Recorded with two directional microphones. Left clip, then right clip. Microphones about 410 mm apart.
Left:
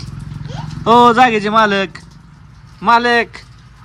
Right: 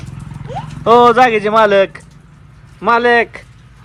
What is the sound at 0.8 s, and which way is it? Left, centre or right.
Speech, right.